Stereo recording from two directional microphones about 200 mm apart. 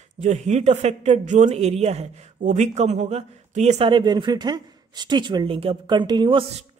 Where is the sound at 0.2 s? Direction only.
35° right (ahead or behind).